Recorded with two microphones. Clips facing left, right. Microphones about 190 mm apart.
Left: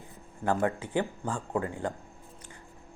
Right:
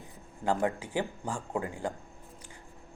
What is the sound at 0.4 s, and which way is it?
Speech, 15° right (ahead or behind).